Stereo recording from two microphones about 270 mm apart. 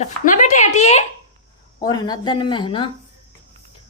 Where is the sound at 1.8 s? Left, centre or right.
Centre.